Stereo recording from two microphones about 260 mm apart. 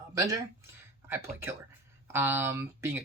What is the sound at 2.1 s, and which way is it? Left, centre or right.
Speech, centre.